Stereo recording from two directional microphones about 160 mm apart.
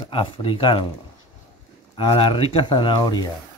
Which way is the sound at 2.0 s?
30° left (ahead or behind).